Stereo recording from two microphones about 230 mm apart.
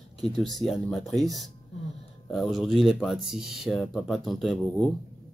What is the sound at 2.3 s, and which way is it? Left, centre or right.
Speech, centre.